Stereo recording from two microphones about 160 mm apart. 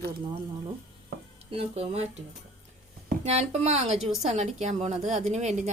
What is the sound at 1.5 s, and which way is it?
Speech, 40° right (ahead or behind).